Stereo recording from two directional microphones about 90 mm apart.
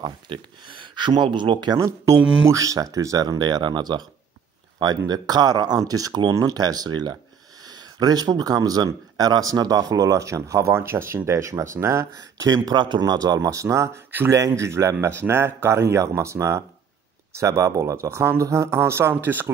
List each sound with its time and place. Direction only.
0.0 s speech: 65° right (ahead or behind)
2.4 s speech: 40° right (ahead or behind)
12.6 s speech: 55° right (ahead or behind); by 19.5 s 25° right (ahead or behind)